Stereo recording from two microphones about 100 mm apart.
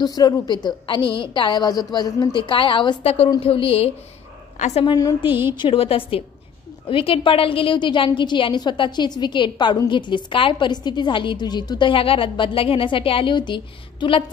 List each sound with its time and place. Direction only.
0.0 s a woman's voice: 40° left (ahead or behind)
3.0 s a woman's voice: 90° left
3.3 s a woman's voice: 65° left (ahead or behind)
5.6 s a woman's voice: 65° left (ahead or behind)